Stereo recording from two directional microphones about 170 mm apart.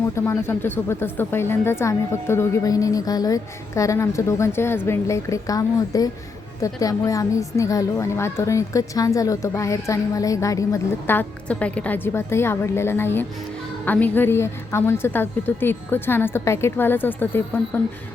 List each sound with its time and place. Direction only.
0.3 s a woman's voice: 15° left (ahead or behind)